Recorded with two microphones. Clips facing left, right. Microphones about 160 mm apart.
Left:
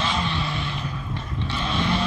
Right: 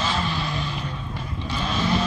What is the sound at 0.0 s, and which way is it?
Vehicle, 5° right (ahead or behind).